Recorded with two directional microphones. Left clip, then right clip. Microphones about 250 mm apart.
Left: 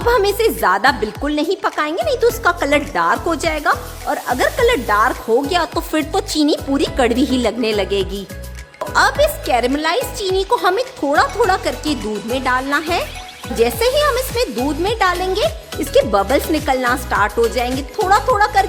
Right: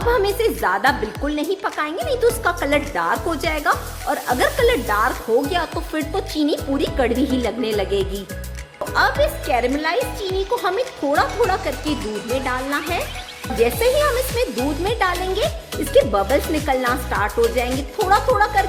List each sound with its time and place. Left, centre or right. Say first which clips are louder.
0.1 s a woman's voice: left 4 dB; left